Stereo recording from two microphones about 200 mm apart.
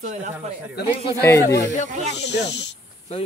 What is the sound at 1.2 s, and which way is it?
Speech, 15° left (ahead or behind).